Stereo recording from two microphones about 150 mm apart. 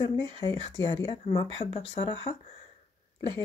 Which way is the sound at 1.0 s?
35° left (ahead or behind).